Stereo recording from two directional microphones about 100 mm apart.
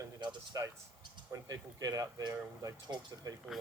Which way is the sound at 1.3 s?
35° right (ahead or behind).